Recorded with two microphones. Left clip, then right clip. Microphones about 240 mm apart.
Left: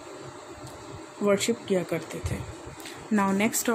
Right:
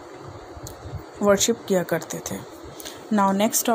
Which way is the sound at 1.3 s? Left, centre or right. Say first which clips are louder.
Right 5 dB; right.